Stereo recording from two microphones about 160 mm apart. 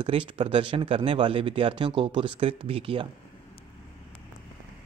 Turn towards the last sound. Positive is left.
turn(degrees=-35)  # may be behind; listen again after turning